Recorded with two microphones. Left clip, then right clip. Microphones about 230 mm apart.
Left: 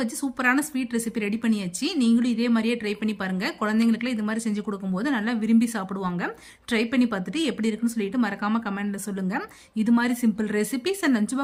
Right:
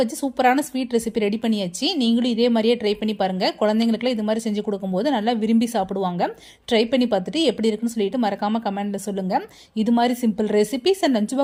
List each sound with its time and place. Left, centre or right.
0.0 s a woman's voice: centre